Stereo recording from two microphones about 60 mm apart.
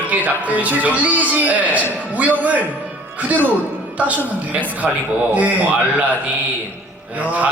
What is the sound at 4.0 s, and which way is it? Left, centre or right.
Speech, right.